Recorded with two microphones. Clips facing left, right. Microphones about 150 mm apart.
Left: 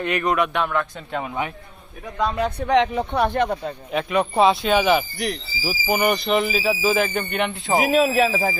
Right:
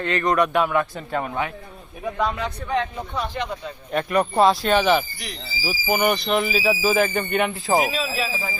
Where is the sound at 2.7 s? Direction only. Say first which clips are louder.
Left 7 dB; 80° left; by 3.7 s 55° left (ahead or behind).